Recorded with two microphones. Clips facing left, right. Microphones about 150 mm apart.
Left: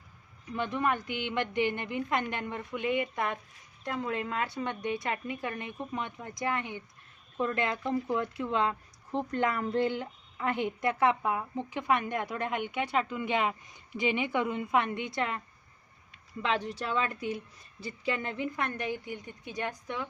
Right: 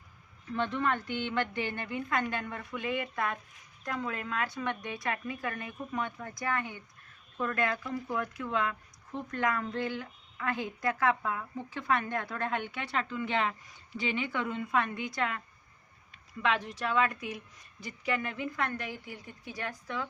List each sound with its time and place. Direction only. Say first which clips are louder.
0.5 s a woman's voice: left 1 dB; 10° left (ahead or behind)
16.4 s a woman's voice: even; 30° left (ahead or behind)